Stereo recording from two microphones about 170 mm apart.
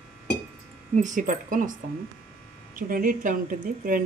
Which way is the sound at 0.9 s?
45° right (ahead or behind).